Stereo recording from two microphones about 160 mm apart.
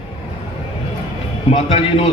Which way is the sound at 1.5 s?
40° left (ahead or behind).